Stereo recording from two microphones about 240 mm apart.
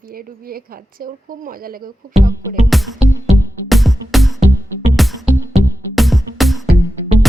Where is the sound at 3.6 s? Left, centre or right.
Centre.